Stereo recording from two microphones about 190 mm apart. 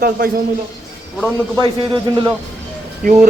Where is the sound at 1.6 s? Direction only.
25° right (ahead or behind).